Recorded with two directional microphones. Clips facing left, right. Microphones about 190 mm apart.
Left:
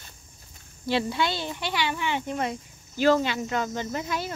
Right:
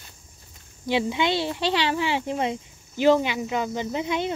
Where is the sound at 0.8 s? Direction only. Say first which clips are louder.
Right 2 dB; 15° right (ahead or behind).